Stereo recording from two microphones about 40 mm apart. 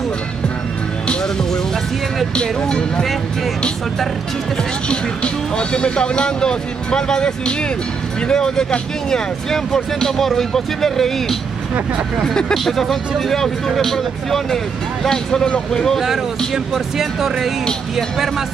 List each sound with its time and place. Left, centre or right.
1.0 s music: centre
2.3 s speech: centre
4.8 s speech: left; by 11.3 s centre
12.5 s speech: centre
16.9 s speech: centre